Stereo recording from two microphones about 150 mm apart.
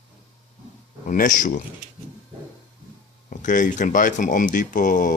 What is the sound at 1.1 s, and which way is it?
Speech, 60° left (ahead or behind).